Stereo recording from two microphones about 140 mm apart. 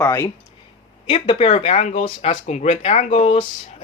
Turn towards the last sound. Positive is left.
turn(degrees=45)  # may be behind; listen again after turning